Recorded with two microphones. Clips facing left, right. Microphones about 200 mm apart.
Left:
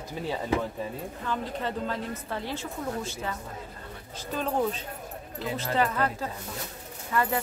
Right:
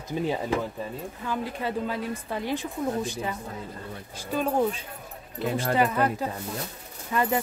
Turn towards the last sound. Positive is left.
turn(degrees=-20)  # may be behind; listen again after turning